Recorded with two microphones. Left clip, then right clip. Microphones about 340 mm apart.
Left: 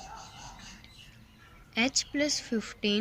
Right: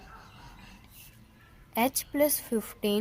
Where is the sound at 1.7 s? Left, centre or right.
Centre.